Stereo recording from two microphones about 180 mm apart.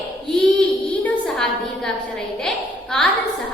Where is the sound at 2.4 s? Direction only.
5° left (ahead or behind).